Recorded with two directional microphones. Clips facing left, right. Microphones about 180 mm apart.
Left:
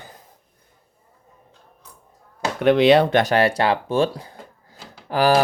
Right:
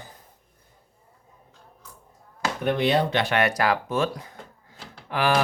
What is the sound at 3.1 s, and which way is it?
Speech, 40° left (ahead or behind).